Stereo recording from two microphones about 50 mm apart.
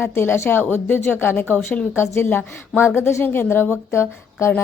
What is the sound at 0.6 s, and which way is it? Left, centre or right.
A woman's voice, left.